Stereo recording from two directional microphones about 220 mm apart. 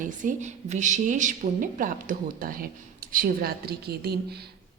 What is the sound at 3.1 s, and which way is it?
A woman's voice, 40° right (ahead or behind).